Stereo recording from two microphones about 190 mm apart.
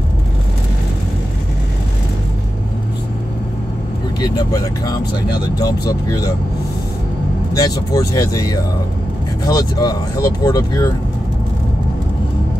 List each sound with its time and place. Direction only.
4.2 s speech: 20° left (ahead or behind)
7.5 s speech: 20° left (ahead or behind)